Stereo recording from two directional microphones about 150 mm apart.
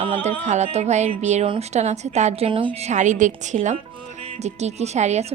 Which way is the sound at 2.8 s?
50° right (ahead or behind).